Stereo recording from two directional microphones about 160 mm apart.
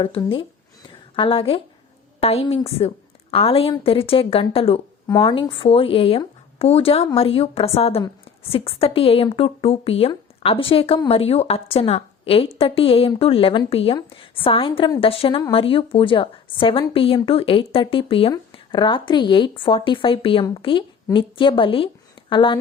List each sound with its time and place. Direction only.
0.2 s a woman's voice: 35° left (ahead or behind)